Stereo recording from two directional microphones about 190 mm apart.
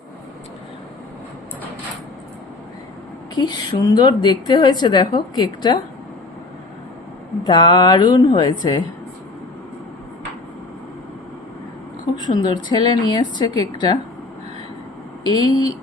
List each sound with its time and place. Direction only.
3.3 s a woman's voice: 20° left (ahead or behind)
7.4 s a woman's voice: 25° left (ahead or behind)
12.1 s a woman's voice: 20° left (ahead or behind)
15.2 s speech: 20° left (ahead or behind)